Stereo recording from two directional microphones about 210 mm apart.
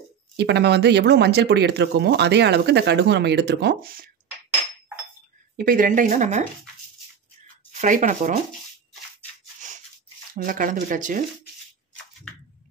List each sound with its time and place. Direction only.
0.4 s speech: 50° right (ahead or behind)
5.6 s speech: 40° right (ahead or behind)
7.8 s speech: 40° right (ahead or behind)
10.3 s speech: 40° right (ahead or behind)